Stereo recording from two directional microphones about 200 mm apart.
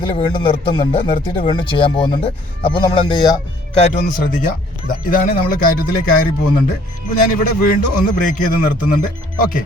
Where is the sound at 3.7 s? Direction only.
35° left (ahead or behind).